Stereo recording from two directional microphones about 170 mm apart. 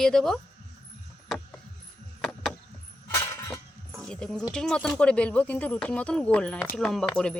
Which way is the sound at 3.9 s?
5° left (ahead or behind).